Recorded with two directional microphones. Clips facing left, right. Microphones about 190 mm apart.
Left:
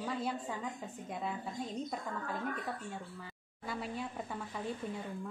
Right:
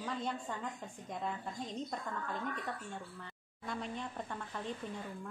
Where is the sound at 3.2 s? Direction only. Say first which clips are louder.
Left 1 dB; 5° left (ahead or behind).